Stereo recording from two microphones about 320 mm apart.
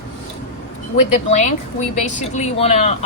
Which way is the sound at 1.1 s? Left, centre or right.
Left.